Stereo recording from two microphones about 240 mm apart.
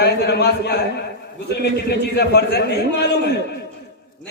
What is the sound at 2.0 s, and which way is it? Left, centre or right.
A man's voice, left.